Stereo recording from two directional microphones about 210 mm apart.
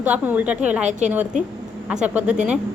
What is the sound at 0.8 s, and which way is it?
Speech, 35° right (ahead or behind).